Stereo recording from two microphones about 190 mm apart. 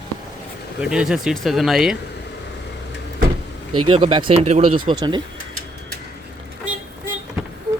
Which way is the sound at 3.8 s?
25° right (ahead or behind).